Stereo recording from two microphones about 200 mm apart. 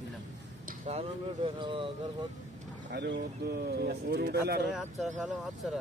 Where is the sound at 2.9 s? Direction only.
60° right (ahead or behind).